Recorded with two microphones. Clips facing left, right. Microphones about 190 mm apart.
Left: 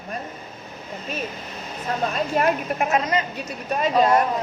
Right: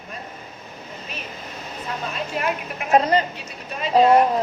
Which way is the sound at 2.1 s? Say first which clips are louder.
Left 4 dB; 45° left (ahead or behind).